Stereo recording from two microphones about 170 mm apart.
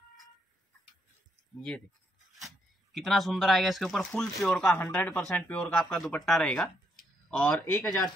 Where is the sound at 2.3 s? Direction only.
Centre (ahead or behind).